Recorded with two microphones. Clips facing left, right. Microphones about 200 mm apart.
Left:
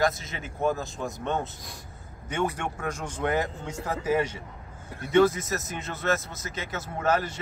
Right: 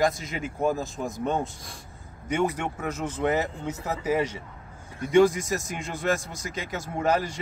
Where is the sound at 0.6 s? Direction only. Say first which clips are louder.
Right 1 dB; 35° right (ahead or behind).